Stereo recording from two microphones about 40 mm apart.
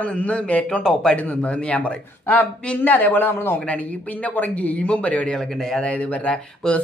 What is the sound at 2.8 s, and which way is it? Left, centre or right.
Speech, left.